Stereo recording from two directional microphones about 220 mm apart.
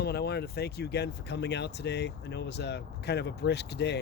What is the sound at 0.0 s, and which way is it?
Speech, 45° left (ahead or behind).